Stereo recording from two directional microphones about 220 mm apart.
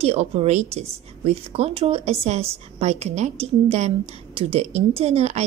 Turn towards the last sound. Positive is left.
turn(degrees=-30)  # may be behind; listen again after turning